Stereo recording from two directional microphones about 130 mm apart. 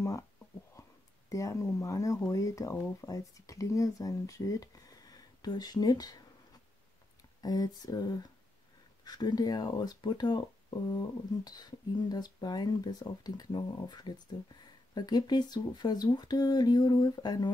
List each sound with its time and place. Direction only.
1.3 s speech: 25° left (ahead or behind)
7.4 s speech: 30° left (ahead or behind)